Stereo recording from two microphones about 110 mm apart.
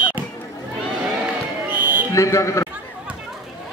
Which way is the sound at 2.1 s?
30° left (ahead or behind).